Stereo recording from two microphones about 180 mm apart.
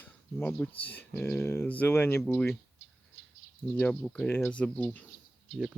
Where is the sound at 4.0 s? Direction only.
5° left (ahead or behind).